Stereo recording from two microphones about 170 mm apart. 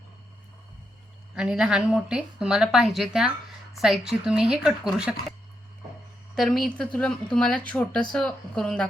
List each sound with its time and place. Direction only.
1.4 s speech: 5° right (ahead or behind)
6.3 s speech: centre (ahead or behind)